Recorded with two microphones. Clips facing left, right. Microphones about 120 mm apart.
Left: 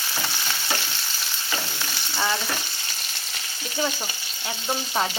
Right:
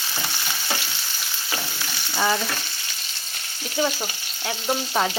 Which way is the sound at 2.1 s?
10° right (ahead or behind).